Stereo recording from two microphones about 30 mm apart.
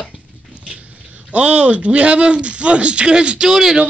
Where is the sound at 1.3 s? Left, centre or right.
Right.